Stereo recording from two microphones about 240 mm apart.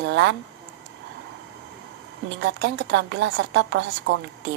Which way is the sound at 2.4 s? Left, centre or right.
Right.